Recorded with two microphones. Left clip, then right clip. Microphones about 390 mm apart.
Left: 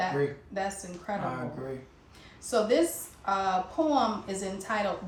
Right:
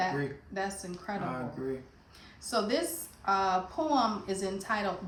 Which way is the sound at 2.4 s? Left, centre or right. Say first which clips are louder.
Left 5 dB; centre.